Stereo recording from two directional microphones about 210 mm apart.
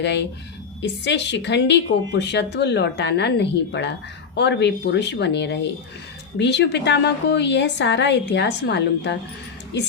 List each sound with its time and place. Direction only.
0.0 s a woman's voice: 55° left (ahead or behind)